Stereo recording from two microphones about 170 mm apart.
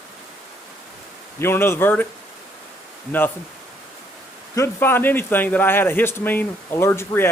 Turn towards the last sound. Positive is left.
turn(degrees=15)  # may be behind; listen again after turning